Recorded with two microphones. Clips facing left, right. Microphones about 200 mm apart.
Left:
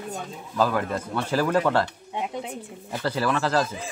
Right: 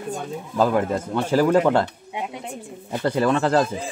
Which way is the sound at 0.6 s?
25° right (ahead or behind).